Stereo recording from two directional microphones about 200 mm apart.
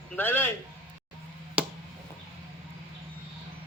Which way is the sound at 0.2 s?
10° left (ahead or behind).